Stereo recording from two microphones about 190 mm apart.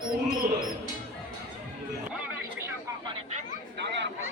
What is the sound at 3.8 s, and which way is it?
Chatter, 65° right (ahead or behind).